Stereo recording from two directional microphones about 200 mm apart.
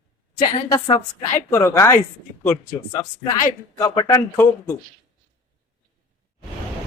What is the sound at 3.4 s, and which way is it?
Speech, 15° left (ahead or behind).